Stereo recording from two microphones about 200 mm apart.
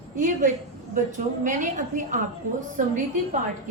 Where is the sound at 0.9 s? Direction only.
40° right (ahead or behind).